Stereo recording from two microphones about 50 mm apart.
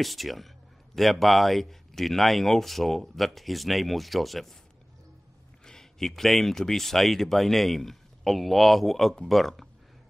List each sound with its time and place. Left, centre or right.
0.0 s speech: centre
5.7 s speech: centre